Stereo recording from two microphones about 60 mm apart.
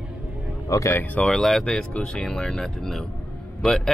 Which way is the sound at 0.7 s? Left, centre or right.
Left.